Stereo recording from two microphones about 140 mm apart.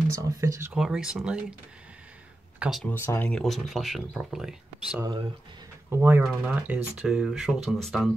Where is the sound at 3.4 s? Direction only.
Centre (ahead or behind).